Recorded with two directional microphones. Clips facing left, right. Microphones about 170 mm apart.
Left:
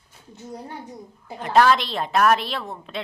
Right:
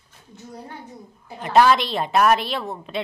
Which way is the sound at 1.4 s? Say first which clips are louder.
Right 1 dB; 5° right (ahead or behind).